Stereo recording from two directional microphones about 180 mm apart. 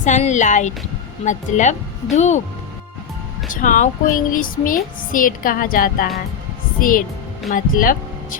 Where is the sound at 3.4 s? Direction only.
45° left (ahead or behind).